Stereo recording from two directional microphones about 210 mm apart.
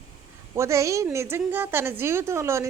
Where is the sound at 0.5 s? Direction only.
15° right (ahead or behind).